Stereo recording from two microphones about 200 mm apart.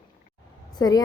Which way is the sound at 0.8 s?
20° left (ahead or behind).